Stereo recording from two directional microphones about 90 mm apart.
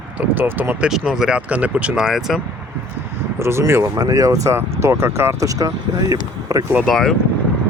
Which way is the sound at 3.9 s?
40° right (ahead or behind).